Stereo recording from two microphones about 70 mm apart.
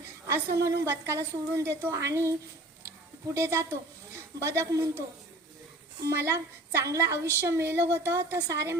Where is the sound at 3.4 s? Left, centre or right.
Right.